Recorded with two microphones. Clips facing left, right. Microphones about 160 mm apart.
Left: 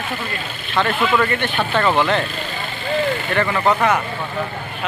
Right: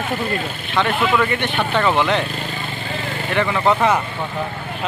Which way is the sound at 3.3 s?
15° right (ahead or behind).